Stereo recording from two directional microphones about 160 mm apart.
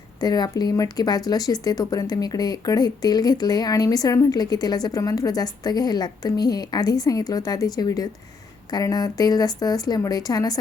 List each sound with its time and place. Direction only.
0.2 s speech: 25° left (ahead or behind)